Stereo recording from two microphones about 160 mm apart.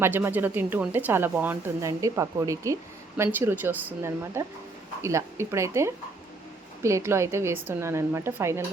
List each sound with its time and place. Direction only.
0.0 s a woman's voice: 10° right (ahead or behind)